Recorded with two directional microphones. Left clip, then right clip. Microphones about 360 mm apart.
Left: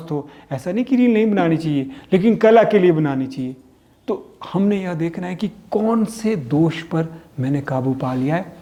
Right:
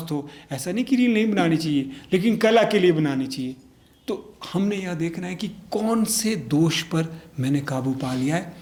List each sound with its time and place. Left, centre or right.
0.0 s speech: centre